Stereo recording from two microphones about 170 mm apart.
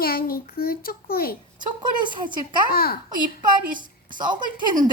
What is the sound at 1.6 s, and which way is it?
Speech, 25° right (ahead or behind).